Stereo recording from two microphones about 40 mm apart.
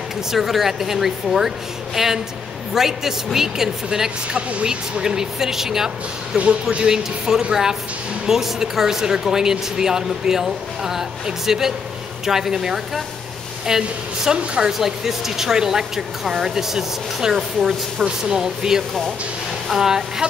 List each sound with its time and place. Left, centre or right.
0.3 s speech: centre
4.3 s speech: right
4.6 s speech: centre